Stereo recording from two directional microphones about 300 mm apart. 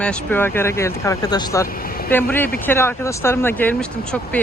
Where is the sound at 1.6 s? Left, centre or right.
Left.